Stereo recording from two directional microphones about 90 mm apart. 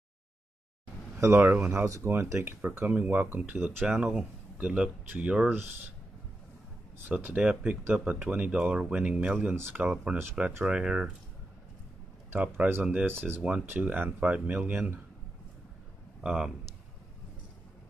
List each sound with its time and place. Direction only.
1.1 s speech: 30° right (ahead or behind)
7.1 s speech: 10° right (ahead or behind)
12.3 s speech: 20° right (ahead or behind)
14.7 s speech: 25° right (ahead or behind)
16.2 s speech: 5° right (ahead or behind)